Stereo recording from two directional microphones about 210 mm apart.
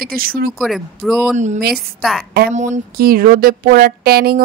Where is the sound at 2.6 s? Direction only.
35° right (ahead or behind).